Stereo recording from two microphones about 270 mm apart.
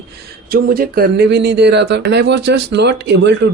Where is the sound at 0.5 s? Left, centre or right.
Right.